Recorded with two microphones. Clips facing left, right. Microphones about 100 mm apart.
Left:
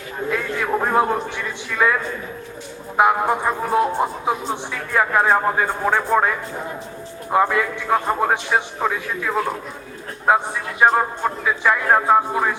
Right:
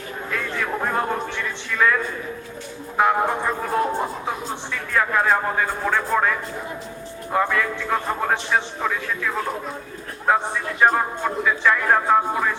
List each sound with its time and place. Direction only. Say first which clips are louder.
0.3 s a sound: left 4 dB; 15° left (ahead or behind)
3.0 s a man's voice: left 2 dB; 15° left (ahead or behind)
7.3 s a man's voice: left 3 dB; 20° left (ahead or behind)